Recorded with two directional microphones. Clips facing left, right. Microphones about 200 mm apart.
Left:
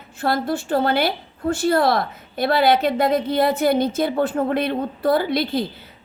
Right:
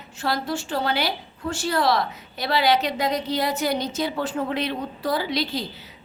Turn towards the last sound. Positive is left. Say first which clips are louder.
# left 5 dB
turn(degrees=55)  # may be behind; listen again after turning